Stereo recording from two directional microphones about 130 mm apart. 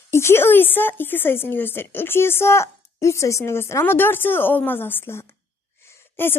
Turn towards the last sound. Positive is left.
turn(degrees=15)  # may be behind; listen again after turning